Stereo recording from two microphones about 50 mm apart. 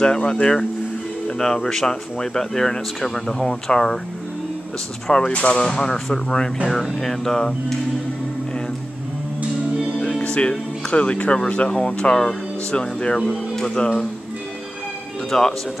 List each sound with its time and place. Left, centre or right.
0.0 s speech: centre
5.0 s speech: centre
6.7 s speech: centre
10.2 s speech: left
15.3 s speech: centre